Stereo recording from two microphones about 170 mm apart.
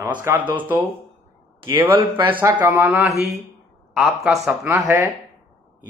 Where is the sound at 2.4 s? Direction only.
15° right (ahead or behind).